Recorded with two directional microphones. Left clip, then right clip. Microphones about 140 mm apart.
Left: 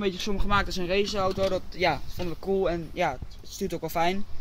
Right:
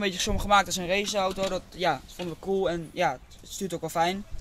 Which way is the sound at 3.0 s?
45° right (ahead or behind).